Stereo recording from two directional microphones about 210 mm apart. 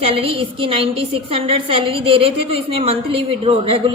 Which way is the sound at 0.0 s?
25° right (ahead or behind).